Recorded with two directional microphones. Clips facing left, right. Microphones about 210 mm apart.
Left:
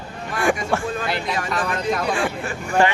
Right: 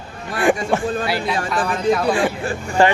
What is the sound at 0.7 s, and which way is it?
Speech, 20° right (ahead or behind).